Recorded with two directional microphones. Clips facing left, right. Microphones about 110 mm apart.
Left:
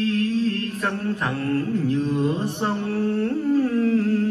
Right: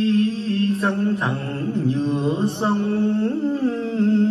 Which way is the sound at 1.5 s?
25° right (ahead or behind).